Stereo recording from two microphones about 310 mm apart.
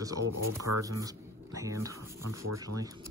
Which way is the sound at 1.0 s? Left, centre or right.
Centre.